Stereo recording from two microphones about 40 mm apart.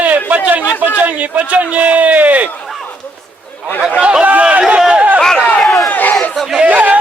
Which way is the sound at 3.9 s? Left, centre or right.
Right.